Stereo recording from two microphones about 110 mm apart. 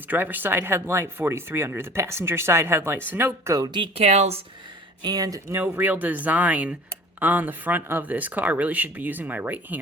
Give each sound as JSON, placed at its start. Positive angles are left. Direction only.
{"t": 0.1, "sound": "speech", "side_deg": -15}
{"t": 3.7, "sound": "speech", "side_deg": -50}
{"t": 4.0, "sound": "speech", "side_deg": -70}
{"t": 5.0, "sound": "speech", "side_deg": -35}
{"t": 5.5, "sound": "speech", "side_deg": -15}